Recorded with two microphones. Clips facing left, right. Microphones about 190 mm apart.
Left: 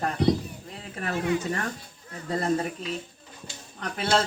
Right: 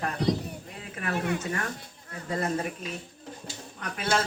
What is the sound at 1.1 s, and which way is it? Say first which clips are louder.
Speech: left 3 dB; 60° right (ahead or behind).